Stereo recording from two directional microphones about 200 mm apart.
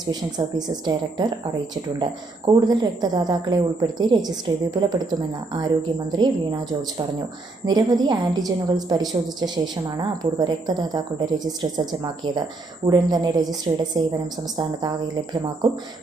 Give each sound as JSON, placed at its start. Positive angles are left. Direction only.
{"t": 0.1, "sound": "a woman's voice", "side_deg": -20}
{"t": 2.5, "sound": "a woman's voice", "side_deg": -20}